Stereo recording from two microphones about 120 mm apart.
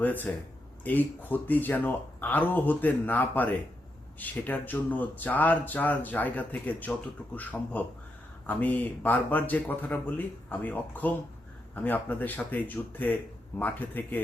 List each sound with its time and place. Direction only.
0.0 s speech: 15° left (ahead or behind)